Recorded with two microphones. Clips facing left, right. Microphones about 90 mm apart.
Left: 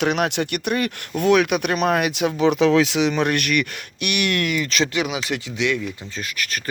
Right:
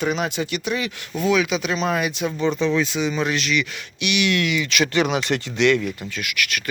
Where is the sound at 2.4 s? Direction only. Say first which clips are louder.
Left 5 dB; 90° left; by 4.8 s 40° left (ahead or behind).